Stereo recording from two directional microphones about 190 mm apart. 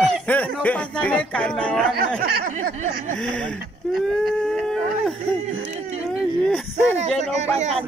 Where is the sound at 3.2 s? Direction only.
5° left (ahead or behind).